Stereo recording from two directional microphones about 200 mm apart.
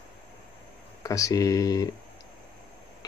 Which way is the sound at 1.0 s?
15° left (ahead or behind).